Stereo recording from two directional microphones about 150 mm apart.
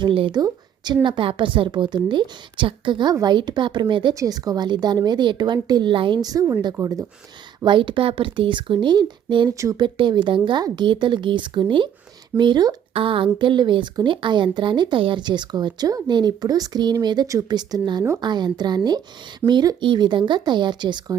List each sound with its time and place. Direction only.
0.0 s speech: 35° right (ahead or behind)
7.6 s speech: 35° right (ahead or behind)